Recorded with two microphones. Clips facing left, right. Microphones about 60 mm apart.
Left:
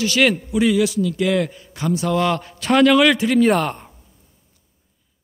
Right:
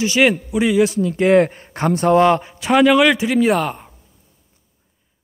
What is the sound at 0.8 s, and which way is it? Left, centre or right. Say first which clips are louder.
A man's voice: right 4 dB; right.